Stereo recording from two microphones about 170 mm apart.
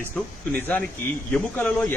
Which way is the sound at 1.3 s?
10° left (ahead or behind).